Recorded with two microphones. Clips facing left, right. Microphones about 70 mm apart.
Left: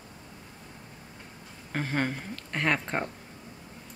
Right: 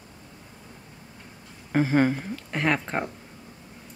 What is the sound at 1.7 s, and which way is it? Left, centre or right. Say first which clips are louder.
Speech: right 9 dB; centre.